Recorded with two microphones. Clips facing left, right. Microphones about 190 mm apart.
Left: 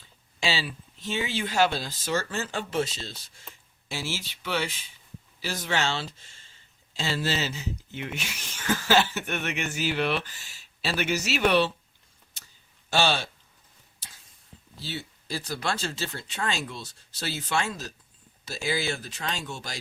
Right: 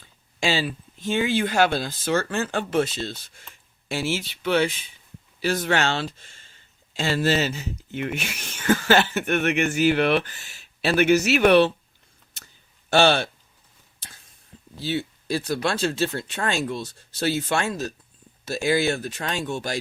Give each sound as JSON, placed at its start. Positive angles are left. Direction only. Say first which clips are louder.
{"t": 0.3, "sound": "speech", "louder": "right 5 dB", "side_deg": -50}
{"t": 12.9, "sound": "speech", "louder": "right 7 dB", "side_deg": -60}
{"t": 14.8, "sound": "speech", "louder": "right 10 dB", "side_deg": -60}